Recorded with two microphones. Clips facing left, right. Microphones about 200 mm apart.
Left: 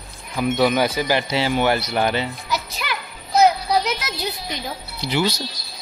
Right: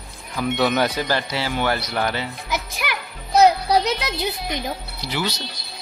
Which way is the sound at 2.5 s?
15° right (ahead or behind).